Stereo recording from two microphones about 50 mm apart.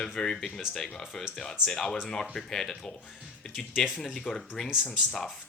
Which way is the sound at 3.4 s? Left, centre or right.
Centre.